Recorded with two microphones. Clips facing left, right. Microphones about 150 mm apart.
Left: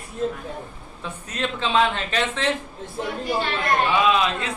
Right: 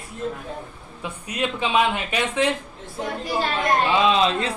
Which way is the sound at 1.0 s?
15° right (ahead or behind).